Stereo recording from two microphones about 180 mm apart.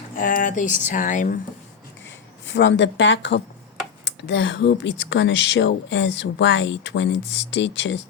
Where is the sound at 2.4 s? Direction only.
90° left.